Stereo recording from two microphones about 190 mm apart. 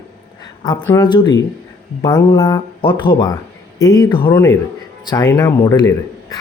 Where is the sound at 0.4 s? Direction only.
20° left (ahead or behind).